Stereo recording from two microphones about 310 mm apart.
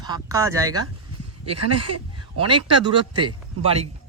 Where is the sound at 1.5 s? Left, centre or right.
Right.